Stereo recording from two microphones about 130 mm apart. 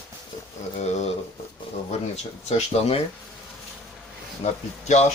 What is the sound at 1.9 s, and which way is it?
Speech, 60° left (ahead or behind).